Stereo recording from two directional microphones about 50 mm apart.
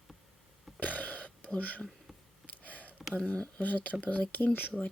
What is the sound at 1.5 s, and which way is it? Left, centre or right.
Speech, left.